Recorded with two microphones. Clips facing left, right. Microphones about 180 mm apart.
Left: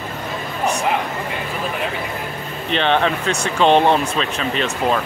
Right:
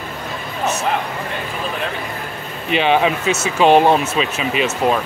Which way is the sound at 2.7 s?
10° right (ahead or behind).